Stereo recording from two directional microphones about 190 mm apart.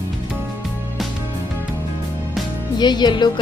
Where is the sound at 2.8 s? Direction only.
20° left (ahead or behind).